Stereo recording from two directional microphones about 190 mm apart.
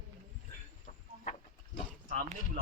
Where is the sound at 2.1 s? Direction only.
35° right (ahead or behind).